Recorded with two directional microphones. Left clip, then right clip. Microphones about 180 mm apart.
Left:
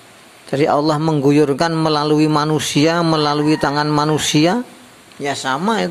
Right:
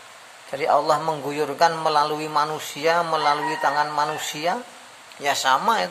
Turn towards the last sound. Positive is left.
turn(degrees=10)  # may be behind; listen again after turning